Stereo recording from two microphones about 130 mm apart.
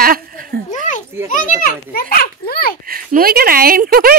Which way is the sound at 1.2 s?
85° left.